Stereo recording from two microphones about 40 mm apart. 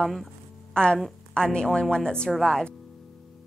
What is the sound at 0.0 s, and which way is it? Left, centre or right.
Speech, centre.